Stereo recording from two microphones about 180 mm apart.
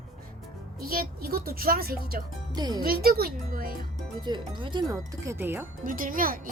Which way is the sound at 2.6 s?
20° right (ahead or behind).